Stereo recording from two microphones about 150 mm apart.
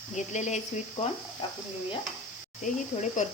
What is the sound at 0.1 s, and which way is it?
Speech, 50° left (ahead or behind).